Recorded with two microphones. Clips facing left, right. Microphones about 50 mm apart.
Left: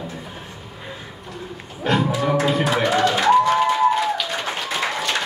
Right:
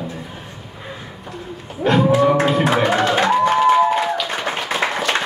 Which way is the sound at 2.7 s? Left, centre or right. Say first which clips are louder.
Right 2 dB; right.